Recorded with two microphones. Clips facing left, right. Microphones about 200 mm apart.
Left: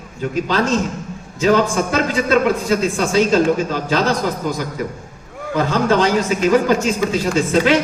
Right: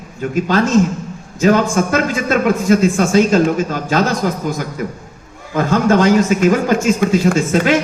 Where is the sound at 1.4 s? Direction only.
45° right (ahead or behind).